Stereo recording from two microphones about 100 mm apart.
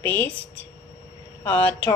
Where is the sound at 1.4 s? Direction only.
20° left (ahead or behind).